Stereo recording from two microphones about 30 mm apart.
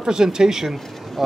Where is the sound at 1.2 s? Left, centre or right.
Centre.